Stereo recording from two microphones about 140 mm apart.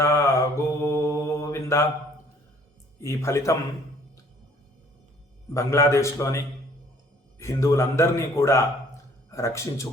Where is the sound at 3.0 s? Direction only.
20° left (ahead or behind).